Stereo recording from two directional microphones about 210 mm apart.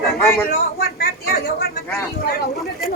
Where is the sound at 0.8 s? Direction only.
45° left (ahead or behind).